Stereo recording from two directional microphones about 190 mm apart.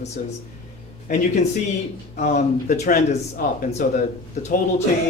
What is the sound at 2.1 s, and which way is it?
Speech, 35° left (ahead or behind).